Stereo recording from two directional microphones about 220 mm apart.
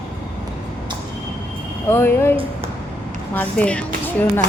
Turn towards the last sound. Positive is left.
turn(degrees=5)  # may be behind; listen again after turning